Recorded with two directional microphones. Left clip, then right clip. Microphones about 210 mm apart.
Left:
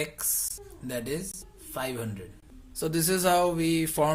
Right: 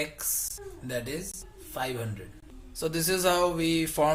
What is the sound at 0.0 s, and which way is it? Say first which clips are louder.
Speech: even; 35° left (ahead or behind).